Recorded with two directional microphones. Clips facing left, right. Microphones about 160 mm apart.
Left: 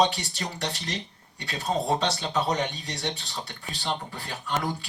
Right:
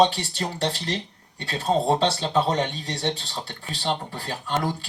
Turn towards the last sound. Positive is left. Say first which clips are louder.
# right 3 dB
turn(degrees=-30)  # may be behind; listen again after turning